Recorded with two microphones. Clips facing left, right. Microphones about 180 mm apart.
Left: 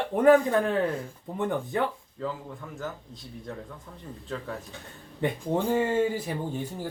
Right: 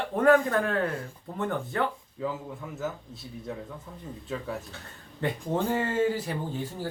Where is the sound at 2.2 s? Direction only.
10° right (ahead or behind).